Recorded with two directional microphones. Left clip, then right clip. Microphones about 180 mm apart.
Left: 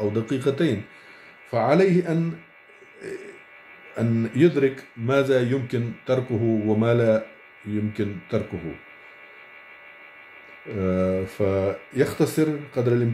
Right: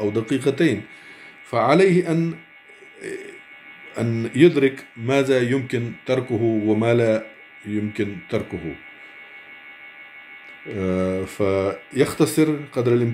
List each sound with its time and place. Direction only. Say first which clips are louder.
0.0 s speech: right 3 dB; centre (ahead or behind)
3.0 s a sound: right 3 dB; centre (ahead or behind)
3.9 s speech: right 1 dB; centre (ahead or behind)
10.7 s speech: even; centre (ahead or behind)